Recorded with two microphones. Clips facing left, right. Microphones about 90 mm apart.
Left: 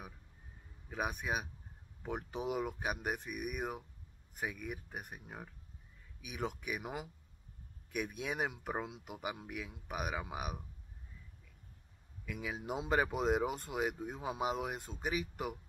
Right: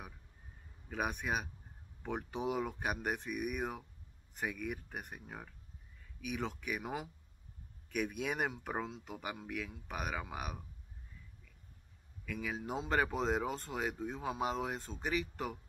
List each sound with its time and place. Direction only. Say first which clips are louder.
0.8 s speech: right 1 dB; 5° left (ahead or behind)
12.3 s speech: right 1 dB; 10° left (ahead or behind)